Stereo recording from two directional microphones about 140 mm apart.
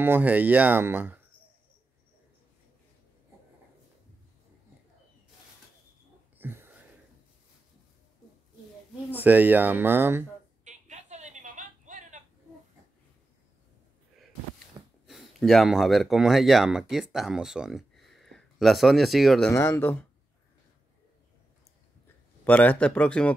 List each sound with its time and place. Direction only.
0.0 s speech: 15° right (ahead or behind)
6.3 s wheeze: 15° right (ahead or behind)
9.1 s speech: 10° right (ahead or behind)
10.6 s a sound: 60° right (ahead or behind)
15.0 s speech: centre (ahead or behind)
19.5 s speech: 15° left (ahead or behind)
22.0 s speech: 10° left (ahead or behind)